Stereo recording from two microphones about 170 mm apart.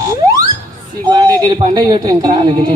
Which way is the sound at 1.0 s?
25° right (ahead or behind).